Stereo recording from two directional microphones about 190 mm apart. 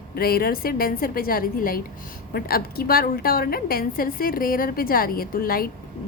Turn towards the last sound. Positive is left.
turn(degrees=50)  # may be behind; listen again after turning